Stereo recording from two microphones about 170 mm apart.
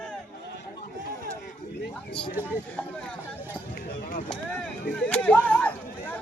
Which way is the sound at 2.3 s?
10° right (ahead or behind).